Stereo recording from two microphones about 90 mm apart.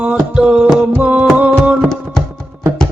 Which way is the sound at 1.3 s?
15° right (ahead or behind).